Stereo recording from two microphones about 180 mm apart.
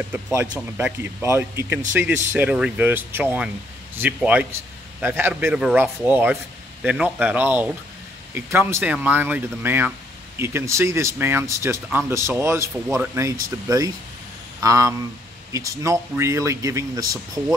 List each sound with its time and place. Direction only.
0.1 s a man's voice: 15° right (ahead or behind)
14.6 s a sound: 20° right (ahead or behind)
15.5 s a man's voice: 15° right (ahead or behind)